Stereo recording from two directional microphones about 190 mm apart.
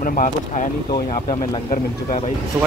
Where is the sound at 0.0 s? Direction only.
45° left (ahead or behind).